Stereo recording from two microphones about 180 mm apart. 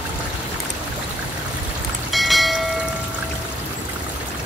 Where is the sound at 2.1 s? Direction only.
Centre (ahead or behind).